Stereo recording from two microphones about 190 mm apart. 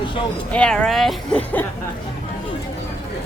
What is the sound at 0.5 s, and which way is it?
Speech, 5° left (ahead or behind).